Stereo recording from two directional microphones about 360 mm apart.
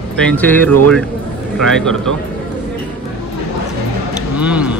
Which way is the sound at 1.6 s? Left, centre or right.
Centre.